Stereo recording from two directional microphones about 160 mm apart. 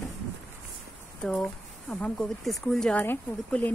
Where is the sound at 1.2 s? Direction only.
5° left (ahead or behind).